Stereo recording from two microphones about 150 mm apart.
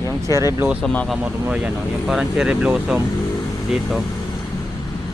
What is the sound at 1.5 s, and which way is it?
Speech, 5° right (ahead or behind).